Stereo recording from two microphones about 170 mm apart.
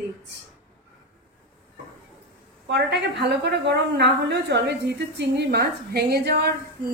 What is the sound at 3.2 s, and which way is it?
A woman's voice, 85° right.